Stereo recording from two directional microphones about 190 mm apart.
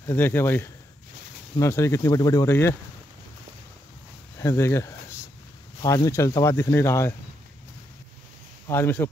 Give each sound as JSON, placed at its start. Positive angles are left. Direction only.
{"t": 0.0, "sound": "speech", "side_deg": 10}
{"t": 4.4, "sound": "speech", "side_deg": 15}
{"t": 8.6, "sound": "speech", "side_deg": 10}